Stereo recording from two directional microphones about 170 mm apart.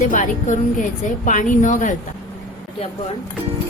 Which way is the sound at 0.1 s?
50° left (ahead or behind).